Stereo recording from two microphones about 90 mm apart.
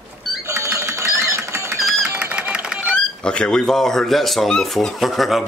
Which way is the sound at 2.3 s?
15° right (ahead or behind).